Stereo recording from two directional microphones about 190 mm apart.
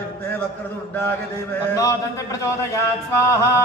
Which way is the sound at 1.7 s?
15° left (ahead or behind).